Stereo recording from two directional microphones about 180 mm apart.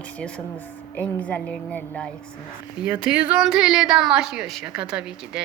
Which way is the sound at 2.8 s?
5° right (ahead or behind).